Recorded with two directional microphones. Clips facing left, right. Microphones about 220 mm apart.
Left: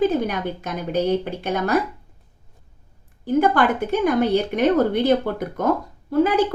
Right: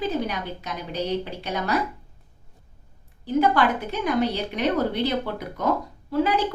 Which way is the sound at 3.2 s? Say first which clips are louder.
Left 3 dB; 50° left (ahead or behind).